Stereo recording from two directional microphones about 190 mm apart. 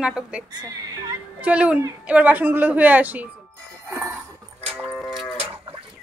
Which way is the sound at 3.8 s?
15° right (ahead or behind).